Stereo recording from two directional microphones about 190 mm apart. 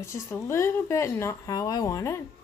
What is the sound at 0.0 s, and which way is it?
Speech, 15° left (ahead or behind).